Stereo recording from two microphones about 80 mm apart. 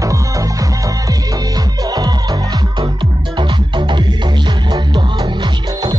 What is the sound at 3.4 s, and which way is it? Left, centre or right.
Music, right.